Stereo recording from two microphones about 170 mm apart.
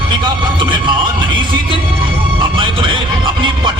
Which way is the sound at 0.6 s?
30° right (ahead or behind).